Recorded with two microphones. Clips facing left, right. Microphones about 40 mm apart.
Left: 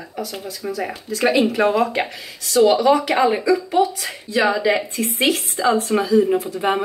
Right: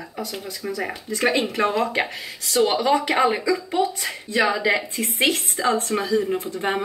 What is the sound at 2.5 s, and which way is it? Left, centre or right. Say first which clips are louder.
Speech: left 5 dB; right.